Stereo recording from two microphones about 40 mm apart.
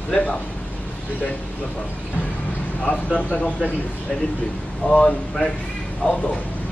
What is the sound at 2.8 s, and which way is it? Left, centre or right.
Speech, left.